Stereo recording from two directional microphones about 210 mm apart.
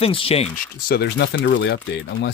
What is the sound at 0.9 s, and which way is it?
Speech, 50° left (ahead or behind).